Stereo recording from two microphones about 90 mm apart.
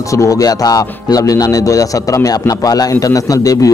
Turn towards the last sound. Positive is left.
turn(degrees=40)  # may be behind; listen again after turning